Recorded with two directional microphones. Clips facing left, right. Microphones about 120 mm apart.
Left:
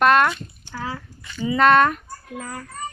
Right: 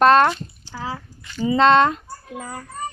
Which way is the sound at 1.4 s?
30° right (ahead or behind).